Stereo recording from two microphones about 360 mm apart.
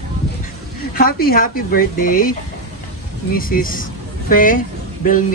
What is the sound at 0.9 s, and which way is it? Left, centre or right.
A man's voice, left.